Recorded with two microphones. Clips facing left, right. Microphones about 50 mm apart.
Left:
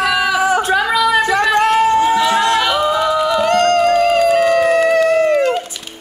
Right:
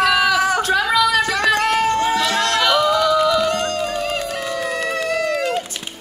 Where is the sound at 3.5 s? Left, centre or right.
Left.